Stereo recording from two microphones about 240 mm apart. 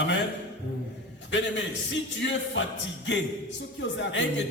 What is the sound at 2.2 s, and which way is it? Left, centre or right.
A man's voice, left.